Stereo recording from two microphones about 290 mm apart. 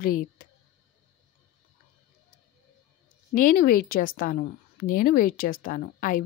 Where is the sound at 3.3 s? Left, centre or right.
Left.